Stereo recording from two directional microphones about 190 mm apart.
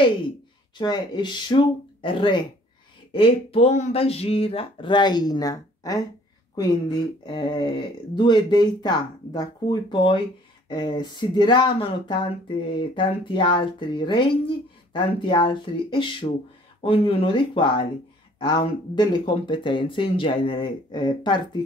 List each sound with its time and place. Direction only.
0.7 s speech: 25° left (ahead or behind)
7.2 s speech: 25° left (ahead or behind)